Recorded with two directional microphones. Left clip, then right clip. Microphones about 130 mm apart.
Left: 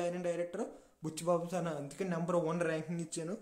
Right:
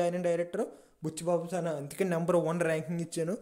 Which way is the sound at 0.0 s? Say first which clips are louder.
Right 6 dB; 40° right (ahead or behind).